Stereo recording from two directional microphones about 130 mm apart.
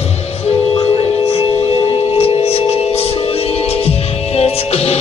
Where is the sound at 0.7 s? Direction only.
45° left (ahead or behind).